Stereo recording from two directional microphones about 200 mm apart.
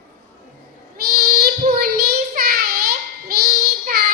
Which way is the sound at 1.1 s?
50° right (ahead or behind).